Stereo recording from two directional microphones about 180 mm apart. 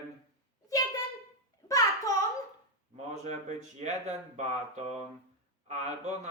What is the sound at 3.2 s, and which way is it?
Speech, 40° right (ahead or behind).